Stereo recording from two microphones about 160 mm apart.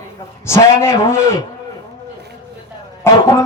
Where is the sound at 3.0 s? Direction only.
15° left (ahead or behind).